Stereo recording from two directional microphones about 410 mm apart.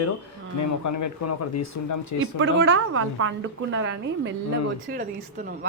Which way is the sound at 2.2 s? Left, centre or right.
Right.